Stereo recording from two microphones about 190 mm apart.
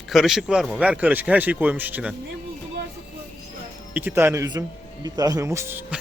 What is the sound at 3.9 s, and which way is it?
Speech, 10° right (ahead or behind).